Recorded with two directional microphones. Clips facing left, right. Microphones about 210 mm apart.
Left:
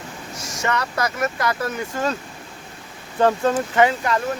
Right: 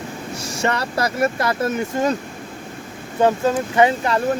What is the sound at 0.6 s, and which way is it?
Speech, 30° right (ahead or behind).